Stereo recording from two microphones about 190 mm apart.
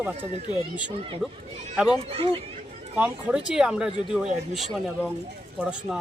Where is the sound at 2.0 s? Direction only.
30° right (ahead or behind).